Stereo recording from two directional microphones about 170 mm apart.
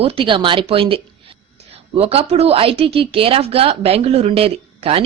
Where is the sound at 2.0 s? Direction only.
35° right (ahead or behind).